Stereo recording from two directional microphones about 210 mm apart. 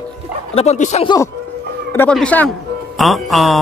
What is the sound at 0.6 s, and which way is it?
Speech, 30° left (ahead or behind).